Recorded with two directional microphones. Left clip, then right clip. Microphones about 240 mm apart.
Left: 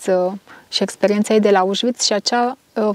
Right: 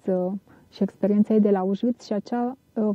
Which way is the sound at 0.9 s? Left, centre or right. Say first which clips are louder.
Left 6 dB; centre.